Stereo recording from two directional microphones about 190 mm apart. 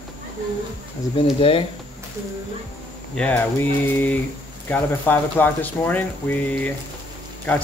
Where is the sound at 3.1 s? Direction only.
5° left (ahead or behind).